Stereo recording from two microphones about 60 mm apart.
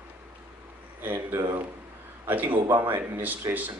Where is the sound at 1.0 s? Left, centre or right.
Right.